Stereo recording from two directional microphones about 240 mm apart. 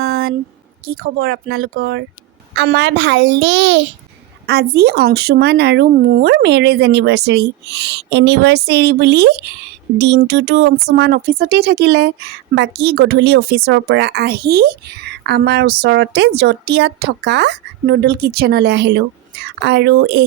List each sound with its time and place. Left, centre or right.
0.0 s a sound: right
0.9 s speech: right
1.1 s speech: right